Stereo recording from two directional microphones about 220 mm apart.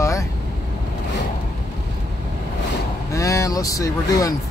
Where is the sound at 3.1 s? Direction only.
15° left (ahead or behind).